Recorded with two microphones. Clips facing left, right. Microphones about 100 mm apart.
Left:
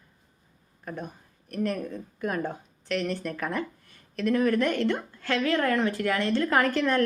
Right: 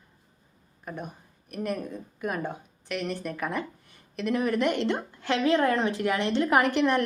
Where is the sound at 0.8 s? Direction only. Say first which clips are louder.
Left 1 dB; 10° right (ahead or behind).